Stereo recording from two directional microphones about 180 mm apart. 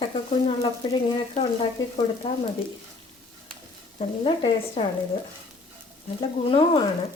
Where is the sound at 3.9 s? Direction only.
30° left (ahead or behind).